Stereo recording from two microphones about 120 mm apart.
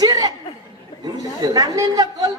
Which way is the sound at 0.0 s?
30° right (ahead or behind).